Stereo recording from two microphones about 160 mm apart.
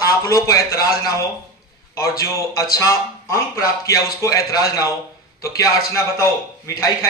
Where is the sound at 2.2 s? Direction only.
20° left (ahead or behind).